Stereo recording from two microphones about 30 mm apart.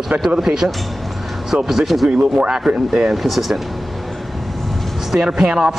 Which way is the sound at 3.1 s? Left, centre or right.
Centre.